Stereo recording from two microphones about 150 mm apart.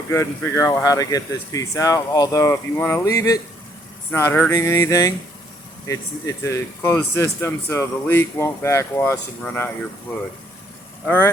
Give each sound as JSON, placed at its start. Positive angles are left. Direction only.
{"t": 0.1, "sound": "speech", "side_deg": 20}
{"t": 11.0, "sound": "speech", "side_deg": 15}